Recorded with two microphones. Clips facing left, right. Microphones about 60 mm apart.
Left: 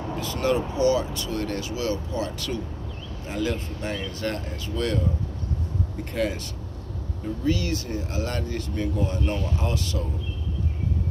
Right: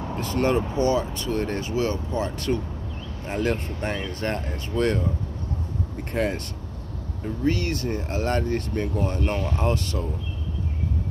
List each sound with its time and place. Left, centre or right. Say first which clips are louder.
0.2 s speech: right 2 dB; right
6.1 s speech: right 1 dB; right
7.4 s speech: right 2 dB; right